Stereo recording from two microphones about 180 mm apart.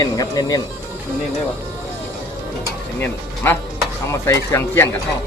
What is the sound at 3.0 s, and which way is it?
Speech, 10° left (ahead or behind).